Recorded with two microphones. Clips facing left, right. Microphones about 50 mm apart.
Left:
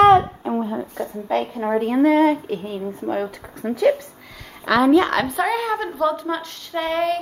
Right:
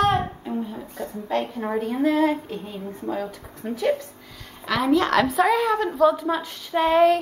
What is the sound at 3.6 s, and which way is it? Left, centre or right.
Speech, left.